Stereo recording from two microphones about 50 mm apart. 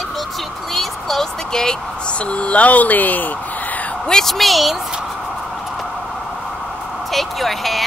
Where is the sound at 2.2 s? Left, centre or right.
Left.